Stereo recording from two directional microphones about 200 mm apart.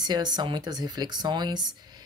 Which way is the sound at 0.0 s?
20° right (ahead or behind).